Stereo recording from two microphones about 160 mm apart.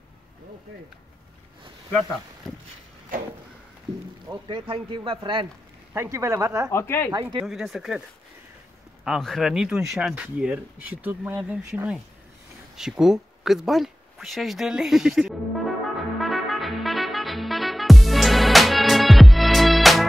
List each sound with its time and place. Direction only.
1.9 s speech: 5° left (ahead or behind)
4.3 s speech: 30° right (ahead or behind)
5.9 s speech: 20° right (ahead or behind)
6.7 s speech: 15° left (ahead or behind)
7.4 s speech: centre (ahead or behind)
9.0 s speech: centre (ahead or behind)
16.2 s music: centre (ahead or behind)